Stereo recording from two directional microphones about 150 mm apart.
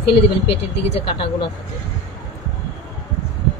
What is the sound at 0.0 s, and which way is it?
A woman's voice, 40° left (ahead or behind).